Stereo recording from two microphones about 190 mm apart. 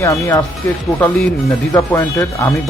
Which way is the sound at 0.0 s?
15° left (ahead or behind).